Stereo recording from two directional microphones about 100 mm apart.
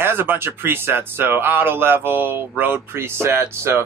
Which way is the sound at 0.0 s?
20° right (ahead or behind).